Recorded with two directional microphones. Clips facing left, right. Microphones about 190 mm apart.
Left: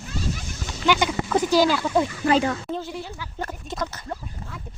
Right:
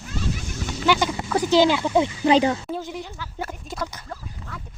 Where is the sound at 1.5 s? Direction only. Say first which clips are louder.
Right 4 dB; 20° right (ahead or behind).